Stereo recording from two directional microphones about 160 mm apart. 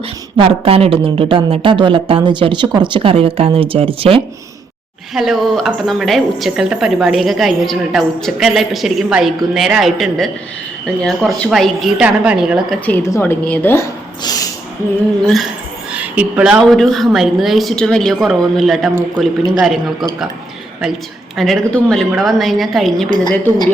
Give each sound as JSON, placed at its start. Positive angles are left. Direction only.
{"t": 0.3, "sound": "speech", "side_deg": -35}
{"t": 5.1, "sound": "a woman's voice", "side_deg": 0}
{"t": 12.8, "sound": "a woman's voice", "side_deg": 15}
{"t": 15.9, "sound": "a woman's voice", "side_deg": -10}
{"t": 21.3, "sound": "a woman's voice", "side_deg": 0}
{"t": 23.0, "sound": "a woman's voice", "side_deg": 25}